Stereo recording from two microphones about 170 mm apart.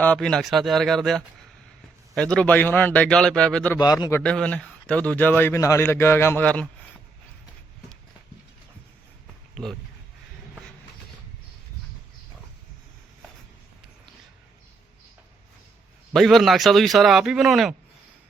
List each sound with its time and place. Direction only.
0.0 s a man's voice: 5° left (ahead or behind)
3.8 s a man's voice: 25° left (ahead or behind)
4.2 s speech: 5° left (ahead or behind)
16.1 s a man's voice: centre (ahead or behind)